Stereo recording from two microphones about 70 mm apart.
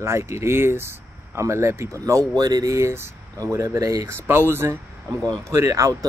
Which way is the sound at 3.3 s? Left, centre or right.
Right.